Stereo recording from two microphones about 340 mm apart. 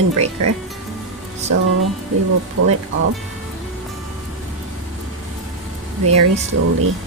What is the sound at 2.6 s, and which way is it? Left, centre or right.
Speech, right.